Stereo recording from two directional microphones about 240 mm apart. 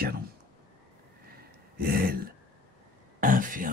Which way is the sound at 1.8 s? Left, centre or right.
Right.